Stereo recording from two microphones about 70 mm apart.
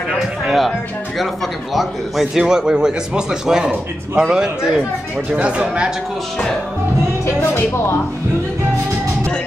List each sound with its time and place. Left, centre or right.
0.5 s speech: centre
7.2 s speech: left